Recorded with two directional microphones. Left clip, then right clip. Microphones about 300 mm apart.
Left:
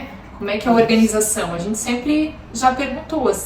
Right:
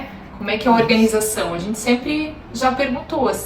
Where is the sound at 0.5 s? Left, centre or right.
Centre.